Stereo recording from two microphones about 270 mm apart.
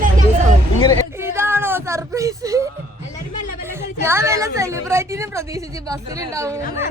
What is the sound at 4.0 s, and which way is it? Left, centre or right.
A woman's voice, centre.